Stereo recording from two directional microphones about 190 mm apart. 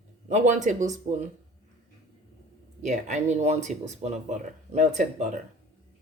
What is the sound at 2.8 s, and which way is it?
Speech, 40° right (ahead or behind).